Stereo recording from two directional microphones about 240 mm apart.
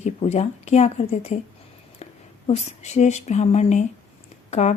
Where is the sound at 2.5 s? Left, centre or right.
Left.